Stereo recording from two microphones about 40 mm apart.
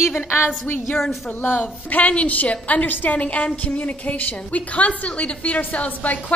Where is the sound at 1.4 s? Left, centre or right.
Left.